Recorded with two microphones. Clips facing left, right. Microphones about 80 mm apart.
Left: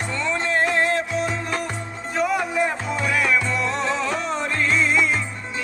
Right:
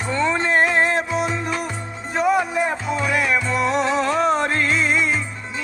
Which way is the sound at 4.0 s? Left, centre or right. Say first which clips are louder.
Right 6 dB; right.